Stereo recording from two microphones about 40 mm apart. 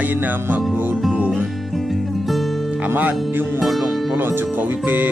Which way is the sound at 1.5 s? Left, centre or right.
Centre.